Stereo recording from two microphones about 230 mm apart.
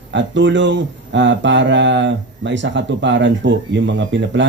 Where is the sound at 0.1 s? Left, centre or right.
Right.